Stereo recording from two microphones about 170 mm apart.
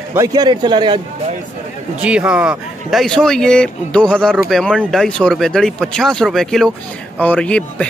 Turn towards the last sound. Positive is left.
turn(degrees=5)  # may be behind; listen again after turning